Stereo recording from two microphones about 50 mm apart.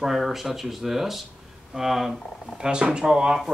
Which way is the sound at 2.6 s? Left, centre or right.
Centre.